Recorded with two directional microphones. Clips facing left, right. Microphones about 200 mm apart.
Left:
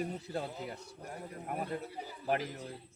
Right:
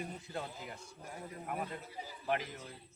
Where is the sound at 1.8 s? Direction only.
60° left (ahead or behind).